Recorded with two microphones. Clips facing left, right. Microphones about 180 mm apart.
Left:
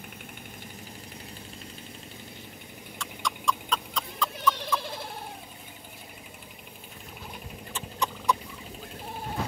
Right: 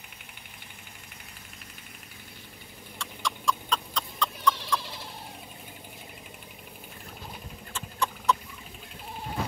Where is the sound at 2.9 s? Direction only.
Centre (ahead or behind).